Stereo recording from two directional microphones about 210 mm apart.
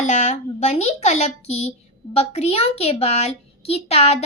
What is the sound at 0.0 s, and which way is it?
A child's voice, 35° left (ahead or behind).